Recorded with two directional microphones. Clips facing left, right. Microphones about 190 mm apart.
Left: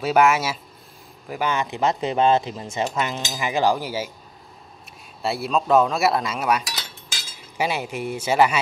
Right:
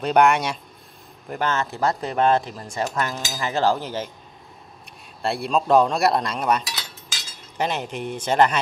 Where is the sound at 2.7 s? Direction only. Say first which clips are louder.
Even; 20° left (ahead or behind).